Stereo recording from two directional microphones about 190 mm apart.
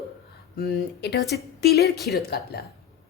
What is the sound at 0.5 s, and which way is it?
A woman's voice, 55° left (ahead or behind).